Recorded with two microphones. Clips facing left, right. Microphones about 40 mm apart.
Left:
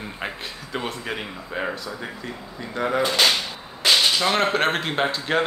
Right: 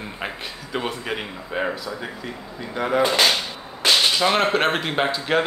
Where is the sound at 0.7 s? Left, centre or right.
Centre.